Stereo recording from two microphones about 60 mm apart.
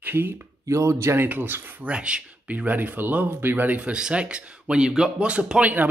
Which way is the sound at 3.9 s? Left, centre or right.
Centre.